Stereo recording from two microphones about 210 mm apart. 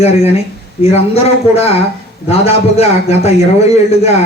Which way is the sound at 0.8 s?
30° left (ahead or behind).